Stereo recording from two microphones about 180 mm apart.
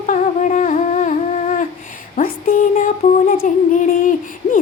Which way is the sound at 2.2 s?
45° left (ahead or behind).